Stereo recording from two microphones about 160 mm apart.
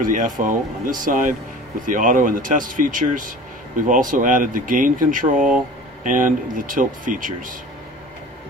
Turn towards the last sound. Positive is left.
turn(degrees=-55)  # may be behind; listen again after turning